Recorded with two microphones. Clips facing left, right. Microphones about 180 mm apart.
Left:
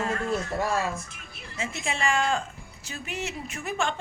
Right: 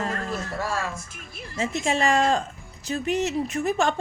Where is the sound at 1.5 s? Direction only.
40° right (ahead or behind).